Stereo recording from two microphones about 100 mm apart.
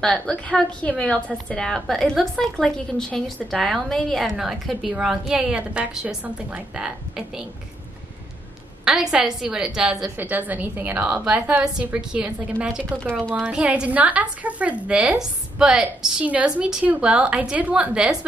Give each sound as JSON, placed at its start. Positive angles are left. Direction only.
{"t": 0.0, "sound": "a woman's voice", "side_deg": 10}
{"t": 8.8, "sound": "a woman's voice", "side_deg": -5}
{"t": 10.1, "sound": "a woman's voice", "side_deg": -20}